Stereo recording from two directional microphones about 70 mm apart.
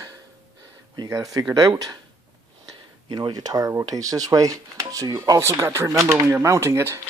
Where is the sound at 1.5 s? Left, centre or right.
Right.